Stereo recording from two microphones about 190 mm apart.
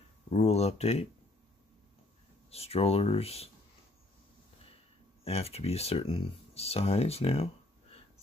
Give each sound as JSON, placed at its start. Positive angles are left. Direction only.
{"t": 0.3, "sound": "speech", "side_deg": 35}
{"t": 2.5, "sound": "speech", "side_deg": 30}
{"t": 5.2, "sound": "speech", "side_deg": 30}